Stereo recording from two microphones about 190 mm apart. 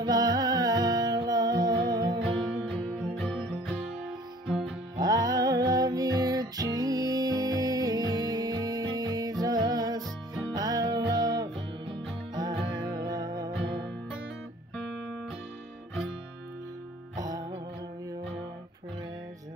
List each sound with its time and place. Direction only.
0.0 s music: 20° right (ahead or behind)
3.2 s music: 5° left (ahead or behind)
4.9 s music: 20° right (ahead or behind)
17.2 s music: 20° right (ahead or behind)